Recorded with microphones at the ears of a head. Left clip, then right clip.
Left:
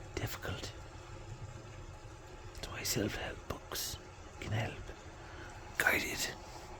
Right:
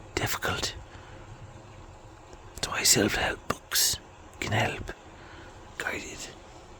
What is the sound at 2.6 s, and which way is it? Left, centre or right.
Whispering, right.